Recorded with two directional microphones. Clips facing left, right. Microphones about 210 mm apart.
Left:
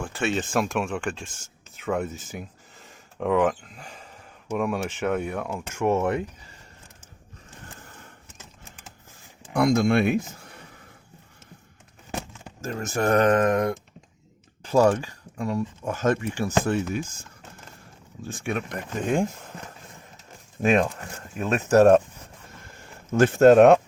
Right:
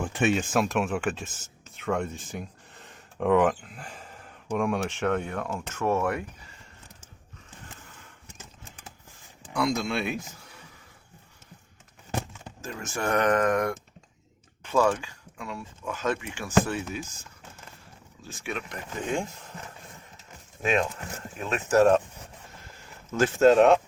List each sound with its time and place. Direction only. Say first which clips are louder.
0.0 s speech: right 2 dB; 20° right (ahead or behind)
0.5 s speech: even; centre (ahead or behind); by 6.2 s 20° left (ahead or behind)
9.5 s speech: left 7 dB; 55° left (ahead or behind)
12.6 s speech: left 6 dB; 40° left (ahead or behind)
13.3 s speech: left 3 dB; 25° left (ahead or behind)
14.6 s speech: left 4 dB; 40° left (ahead or behind)
18.3 s speech: left 6 dB; 50° left (ahead or behind)
20.6 s speech: left 5 dB; 40° left (ahead or behind)